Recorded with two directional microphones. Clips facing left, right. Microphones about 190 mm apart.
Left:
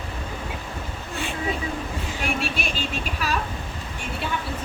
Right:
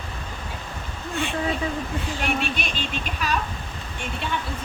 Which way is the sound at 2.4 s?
5° left (ahead or behind).